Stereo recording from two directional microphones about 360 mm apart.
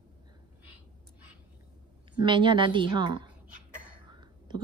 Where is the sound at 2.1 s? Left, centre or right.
Centre.